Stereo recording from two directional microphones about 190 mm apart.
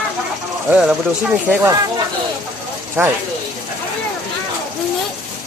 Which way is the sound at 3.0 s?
10° right (ahead or behind).